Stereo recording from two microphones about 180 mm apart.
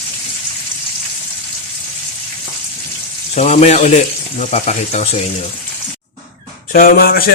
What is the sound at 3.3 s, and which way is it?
Speech, 40° left (ahead or behind).